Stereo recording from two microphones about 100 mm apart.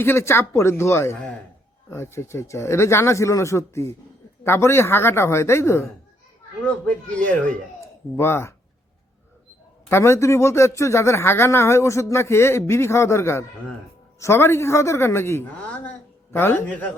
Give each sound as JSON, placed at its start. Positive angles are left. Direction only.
{"t": 0.0, "sound": "speech", "side_deg": 25}
{"t": 6.7, "sound": "speech", "side_deg": 10}
{"t": 8.1, "sound": "speech", "side_deg": 25}
{"t": 9.9, "sound": "speech", "side_deg": 25}
{"t": 15.6, "sound": "speech", "side_deg": 15}